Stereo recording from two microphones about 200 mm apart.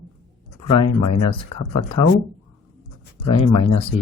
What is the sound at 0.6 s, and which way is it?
Speech, 25° left (ahead or behind).